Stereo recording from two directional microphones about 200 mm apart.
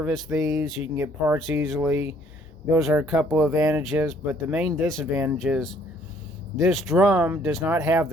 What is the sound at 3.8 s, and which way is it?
Speech, centre (ahead or behind).